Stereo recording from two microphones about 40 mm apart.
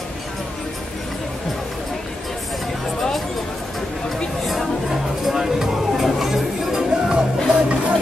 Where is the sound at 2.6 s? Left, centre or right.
Centre.